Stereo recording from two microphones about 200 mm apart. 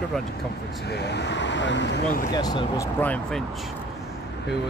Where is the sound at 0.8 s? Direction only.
55° left (ahead or behind).